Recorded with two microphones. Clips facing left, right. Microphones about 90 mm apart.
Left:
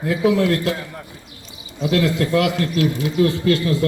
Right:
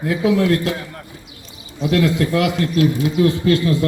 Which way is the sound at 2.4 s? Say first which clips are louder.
Right 1 dB; 20° right (ahead or behind).